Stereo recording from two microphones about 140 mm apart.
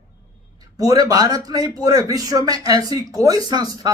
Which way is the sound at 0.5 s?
25° right (ahead or behind).